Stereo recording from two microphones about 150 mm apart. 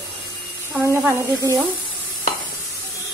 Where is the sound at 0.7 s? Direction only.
20° right (ahead or behind).